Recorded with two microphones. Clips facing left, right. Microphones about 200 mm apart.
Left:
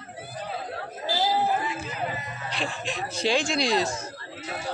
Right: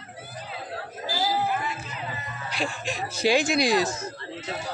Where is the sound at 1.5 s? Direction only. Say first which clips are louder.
Left 2 dB; 30° left (ahead or behind).